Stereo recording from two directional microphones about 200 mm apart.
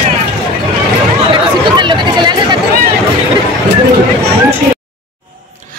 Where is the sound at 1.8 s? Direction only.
25° right (ahead or behind).